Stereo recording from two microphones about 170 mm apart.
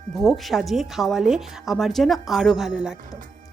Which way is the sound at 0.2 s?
Centre (ahead or behind).